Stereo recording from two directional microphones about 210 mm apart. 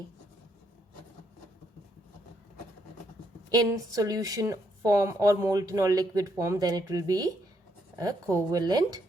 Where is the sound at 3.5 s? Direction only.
15° right (ahead or behind).